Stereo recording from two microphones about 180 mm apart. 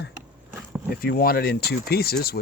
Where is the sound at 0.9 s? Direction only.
55° left (ahead or behind).